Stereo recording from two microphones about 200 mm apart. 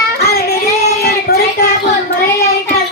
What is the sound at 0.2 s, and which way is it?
Child singing, 55° left (ahead or behind).